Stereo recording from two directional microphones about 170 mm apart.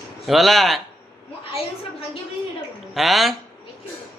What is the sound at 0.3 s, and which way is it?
Speech, centre (ahead or behind).